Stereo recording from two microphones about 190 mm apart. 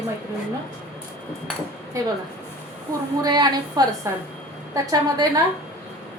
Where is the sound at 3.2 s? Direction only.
20° right (ahead or behind).